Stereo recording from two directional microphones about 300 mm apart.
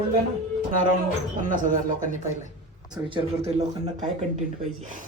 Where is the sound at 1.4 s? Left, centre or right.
Right.